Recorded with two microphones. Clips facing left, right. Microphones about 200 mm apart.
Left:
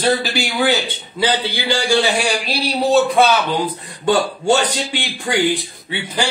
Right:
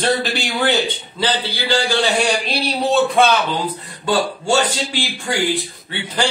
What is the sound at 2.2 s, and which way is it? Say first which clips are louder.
Speech: right 1 dB; centre (ahead or behind).